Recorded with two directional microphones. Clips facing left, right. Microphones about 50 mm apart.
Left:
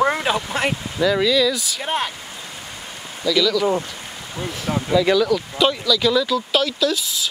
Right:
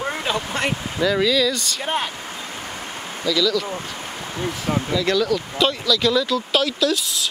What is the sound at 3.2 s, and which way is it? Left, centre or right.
Speech, centre.